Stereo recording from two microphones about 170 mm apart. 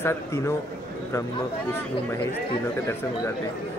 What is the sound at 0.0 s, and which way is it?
Speech, 15° left (ahead or behind).